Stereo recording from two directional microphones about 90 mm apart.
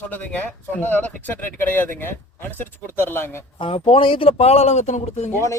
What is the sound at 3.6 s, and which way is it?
Speech, 85° left.